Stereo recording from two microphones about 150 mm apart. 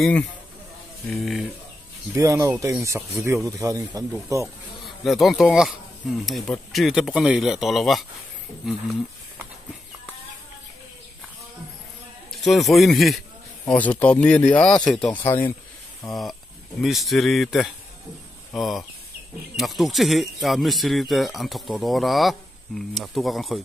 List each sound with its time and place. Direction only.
1.1 s speech: centre (ahead or behind)
2.1 s speech: 20° right (ahead or behind)
4.8 s speech: centre (ahead or behind)
12.3 s a man's voice: centre (ahead or behind)
13.7 s speech: 10° left (ahead or behind)